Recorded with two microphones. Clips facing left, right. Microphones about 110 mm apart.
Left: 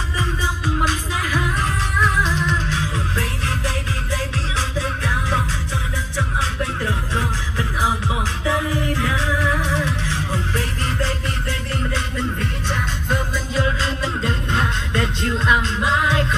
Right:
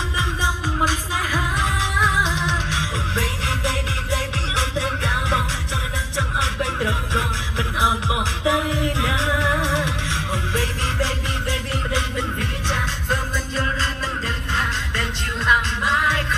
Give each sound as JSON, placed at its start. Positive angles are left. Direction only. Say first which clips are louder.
{"t": 1.6, "sound": "music", "louder": "even", "side_deg": -15}
{"t": 12.6, "sound": "music", "louder": "right 1 dB", "side_deg": 0}
{"t": 14.0, "sound": "music", "louder": "left 4 dB", "side_deg": 25}